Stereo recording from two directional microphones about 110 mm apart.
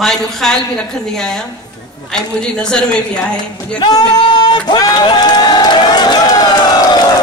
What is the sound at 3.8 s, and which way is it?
Speech, 45° left (ahead or behind).